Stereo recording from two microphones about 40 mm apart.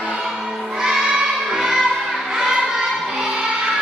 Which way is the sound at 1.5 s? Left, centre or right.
Centre.